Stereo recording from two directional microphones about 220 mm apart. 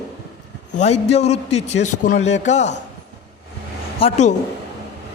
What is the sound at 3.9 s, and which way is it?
Speech, 30° left (ahead or behind).